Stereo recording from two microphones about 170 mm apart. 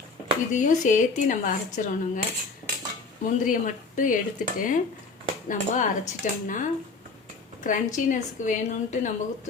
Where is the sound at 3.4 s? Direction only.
50° left (ahead or behind).